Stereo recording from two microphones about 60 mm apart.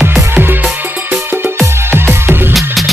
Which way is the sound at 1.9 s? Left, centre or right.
Right.